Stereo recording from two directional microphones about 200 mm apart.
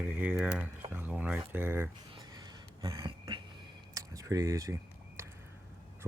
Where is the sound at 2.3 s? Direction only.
20° right (ahead or behind).